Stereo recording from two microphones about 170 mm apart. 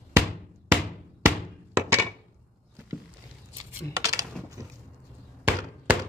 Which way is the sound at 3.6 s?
20° right (ahead or behind).